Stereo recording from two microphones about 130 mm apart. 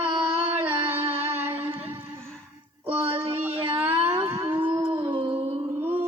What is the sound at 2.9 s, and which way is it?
Synthetic singing, 45° right (ahead or behind).